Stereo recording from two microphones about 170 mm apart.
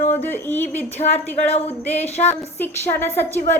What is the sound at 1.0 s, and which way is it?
Speech, 35° left (ahead or behind).